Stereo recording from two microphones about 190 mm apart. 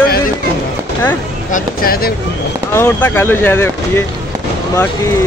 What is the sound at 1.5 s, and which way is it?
Speech, 50° left (ahead or behind).